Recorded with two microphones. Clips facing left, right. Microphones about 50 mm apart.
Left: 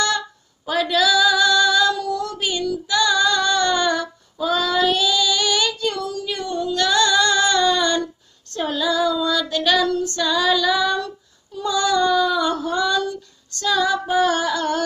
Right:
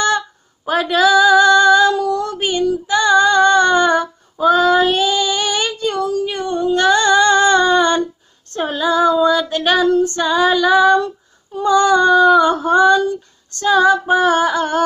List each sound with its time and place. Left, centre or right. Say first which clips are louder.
0.7 s female singing: right 5 dB; right
2.0 s child singing: right 5 dB; right
2.6 s female singing: right 5 dB; right
11.5 s child singing: right 7 dB; right
13.5 s female singing: right 7 dB; right